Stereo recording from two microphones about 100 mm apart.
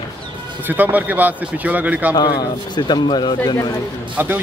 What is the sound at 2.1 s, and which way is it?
Speech, 45° left (ahead or behind).